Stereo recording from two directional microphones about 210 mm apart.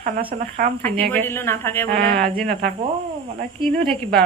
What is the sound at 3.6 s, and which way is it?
Speech, 25° right (ahead or behind).